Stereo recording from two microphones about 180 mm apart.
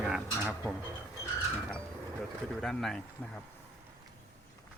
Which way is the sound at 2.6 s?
Centre (ahead or behind).